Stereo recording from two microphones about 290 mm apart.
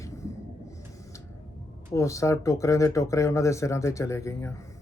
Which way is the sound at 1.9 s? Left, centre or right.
Centre.